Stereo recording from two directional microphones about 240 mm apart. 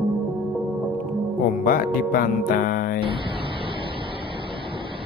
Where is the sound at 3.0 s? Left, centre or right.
Right.